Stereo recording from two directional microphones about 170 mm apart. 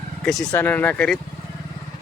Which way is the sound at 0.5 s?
10° left (ahead or behind).